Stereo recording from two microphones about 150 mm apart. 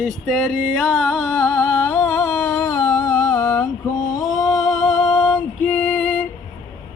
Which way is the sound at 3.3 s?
20° left (ahead or behind).